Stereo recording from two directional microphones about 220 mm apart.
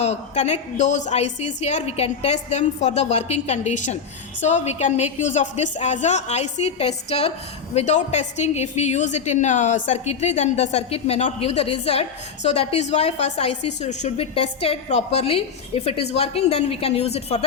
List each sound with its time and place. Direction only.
0.0 s a woman's voice: 30° left (ahead or behind)